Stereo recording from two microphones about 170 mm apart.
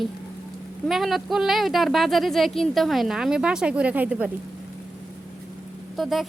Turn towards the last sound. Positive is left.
turn(degrees=0)  # may be behind; listen again after turning